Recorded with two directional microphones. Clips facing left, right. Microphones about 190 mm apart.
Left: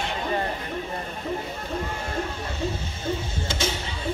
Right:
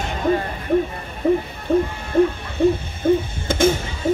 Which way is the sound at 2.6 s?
55° right (ahead or behind).